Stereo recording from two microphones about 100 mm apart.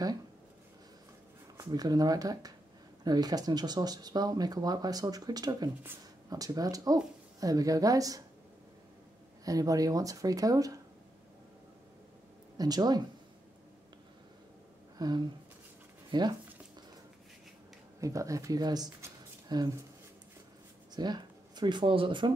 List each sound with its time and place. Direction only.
1.6 s speech: 40° right (ahead or behind)
9.4 s speech: 35° right (ahead or behind)
12.5 s speech: 40° right (ahead or behind)
15.0 s speech: 45° right (ahead or behind)
18.0 s speech: 35° right (ahead or behind)
20.9 s speech: 45° right (ahead or behind)